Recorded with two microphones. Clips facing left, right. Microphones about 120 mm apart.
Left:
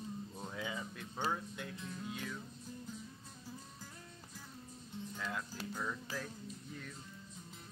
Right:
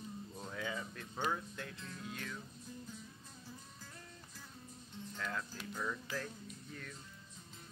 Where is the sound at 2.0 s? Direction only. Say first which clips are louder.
Left 1 dB; 5° left (ahead or behind).